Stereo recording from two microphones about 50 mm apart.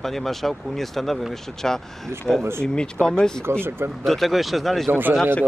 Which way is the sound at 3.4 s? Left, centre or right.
Right.